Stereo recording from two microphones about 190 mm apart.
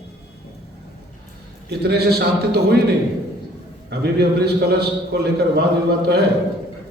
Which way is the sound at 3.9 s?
60° right (ahead or behind).